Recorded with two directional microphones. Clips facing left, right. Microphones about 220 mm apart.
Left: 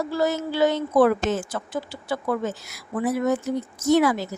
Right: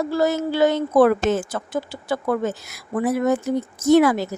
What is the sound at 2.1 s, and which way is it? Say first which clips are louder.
A woman's voice: right 3 dB; 50° right (ahead or behind).